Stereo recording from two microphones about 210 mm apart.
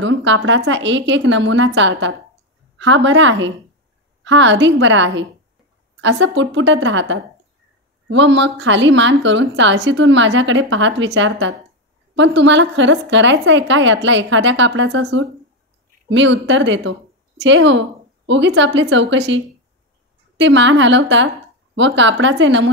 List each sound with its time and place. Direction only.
0.0 s a woman's voice: 60° right (ahead or behind)